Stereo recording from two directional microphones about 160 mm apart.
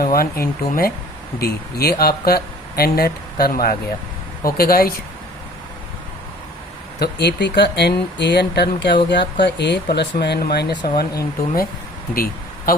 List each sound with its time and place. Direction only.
0.0 s speech: 65° left (ahead or behind)
7.0 s speech: 90° left
12.1 s a sound: 65° left (ahead or behind)